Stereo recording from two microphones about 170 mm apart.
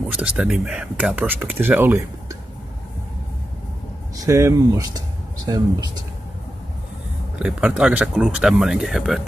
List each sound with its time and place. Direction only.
0.1 s speech: 5° right (ahead or behind)
4.2 s speech: 20° right (ahead or behind)
7.3 s speech: 5° right (ahead or behind)